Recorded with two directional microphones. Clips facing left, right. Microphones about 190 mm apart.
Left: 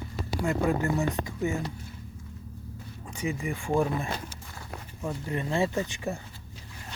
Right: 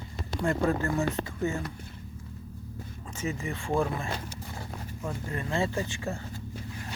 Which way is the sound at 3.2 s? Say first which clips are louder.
Left 2 dB; 15° left (ahead or behind).